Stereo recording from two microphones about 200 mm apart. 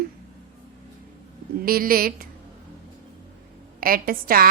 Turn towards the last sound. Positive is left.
turn(degrees=-45)  # may be behind; listen again after turning